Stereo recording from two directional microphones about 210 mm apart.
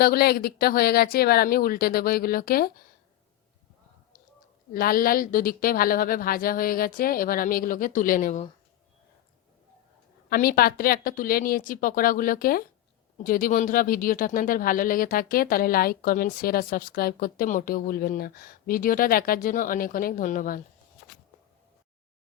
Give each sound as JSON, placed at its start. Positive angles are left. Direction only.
{"t": 0.0, "sound": "speech", "side_deg": 50}
{"t": 4.7, "sound": "speech", "side_deg": 45}
{"t": 10.2, "sound": "speech", "side_deg": 45}